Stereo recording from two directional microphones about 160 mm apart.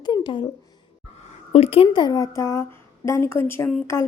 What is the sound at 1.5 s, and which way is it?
A woman's voice, 40° left (ahead or behind).